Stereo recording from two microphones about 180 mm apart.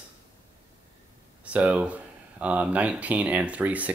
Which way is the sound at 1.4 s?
5° right (ahead or behind).